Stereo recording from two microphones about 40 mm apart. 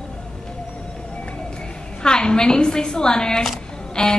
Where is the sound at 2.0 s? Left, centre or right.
Centre.